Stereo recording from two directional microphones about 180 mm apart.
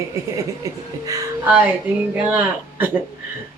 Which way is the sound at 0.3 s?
20° right (ahead or behind).